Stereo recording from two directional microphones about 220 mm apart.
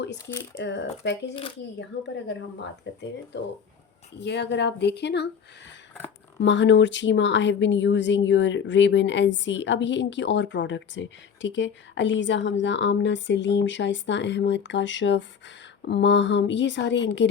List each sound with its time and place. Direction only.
0.5 s speech: 55° left (ahead or behind)
1.3 s speech: 25° left (ahead or behind)
1.8 s speech: 55° left (ahead or behind)
6.4 s a woman's voice: 55° left (ahead or behind)